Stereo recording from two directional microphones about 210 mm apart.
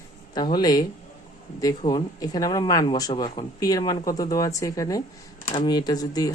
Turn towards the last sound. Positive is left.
turn(degrees=15)  # may be behind; listen again after turning